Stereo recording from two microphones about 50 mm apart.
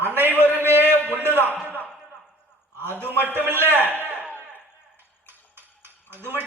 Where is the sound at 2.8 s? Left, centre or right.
Right.